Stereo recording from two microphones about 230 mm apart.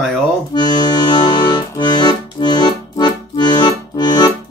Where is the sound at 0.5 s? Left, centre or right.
Centre.